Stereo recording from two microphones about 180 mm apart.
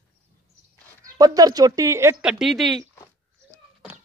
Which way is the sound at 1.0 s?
20° right (ahead or behind).